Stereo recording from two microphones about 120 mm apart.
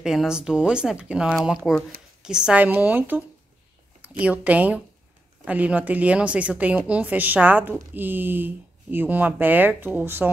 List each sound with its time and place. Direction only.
0.0 s speech: 5° right (ahead or behind)